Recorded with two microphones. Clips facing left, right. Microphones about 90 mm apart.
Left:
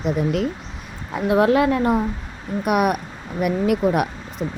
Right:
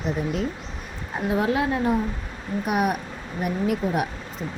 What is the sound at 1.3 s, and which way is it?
A woman's voice, 65° left (ahead or behind).